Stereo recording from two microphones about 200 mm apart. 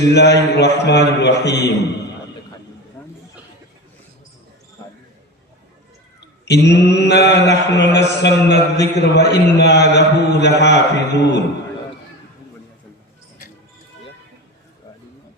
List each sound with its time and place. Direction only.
0.1 s a man's voice: 55° left (ahead or behind)
3.0 s chatter: 10° left (ahead or behind)
6.1 s a man's voice: 60° left (ahead or behind)
8.4 s a man's voice: 35° right (ahead or behind)
9.1 s a man's voice: 60° left (ahead or behind)